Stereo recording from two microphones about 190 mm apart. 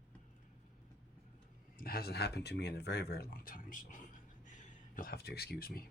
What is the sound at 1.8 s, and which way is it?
Speech, 50° left (ahead or behind).